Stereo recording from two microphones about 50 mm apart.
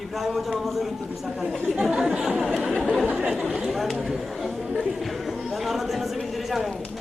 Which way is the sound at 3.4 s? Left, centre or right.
Centre.